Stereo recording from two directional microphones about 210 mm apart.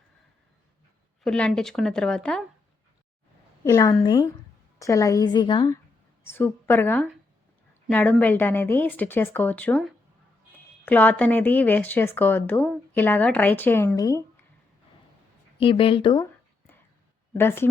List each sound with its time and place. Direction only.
1.2 s a woman's voice: 5° left (ahead or behind)
3.6 s a woman's voice: 15° left (ahead or behind)
15.5 s a woman's voice: 25° left (ahead or behind)
17.3 s a woman's voice: 10° left (ahead or behind)